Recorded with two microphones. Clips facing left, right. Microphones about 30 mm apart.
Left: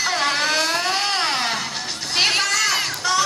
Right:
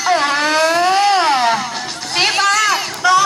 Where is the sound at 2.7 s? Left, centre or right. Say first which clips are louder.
Right 4 dB; right.